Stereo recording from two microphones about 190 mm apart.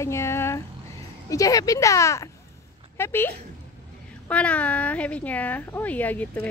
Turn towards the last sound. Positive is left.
turn(degrees=10)  # may be behind; listen again after turning